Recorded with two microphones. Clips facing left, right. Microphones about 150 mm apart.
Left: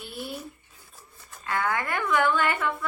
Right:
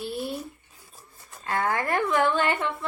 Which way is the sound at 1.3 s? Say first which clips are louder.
Right 1 dB; 25° right (ahead or behind).